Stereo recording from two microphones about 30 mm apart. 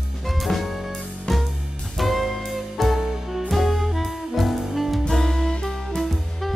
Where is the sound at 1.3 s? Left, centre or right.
Centre.